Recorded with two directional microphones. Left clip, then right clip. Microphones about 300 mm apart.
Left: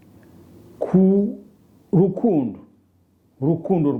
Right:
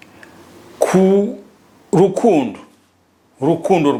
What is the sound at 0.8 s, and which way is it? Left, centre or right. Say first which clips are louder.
A woman's voice: right 6 dB; centre.